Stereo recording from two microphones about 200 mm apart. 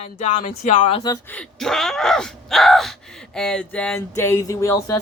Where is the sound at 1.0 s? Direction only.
20° left (ahead or behind).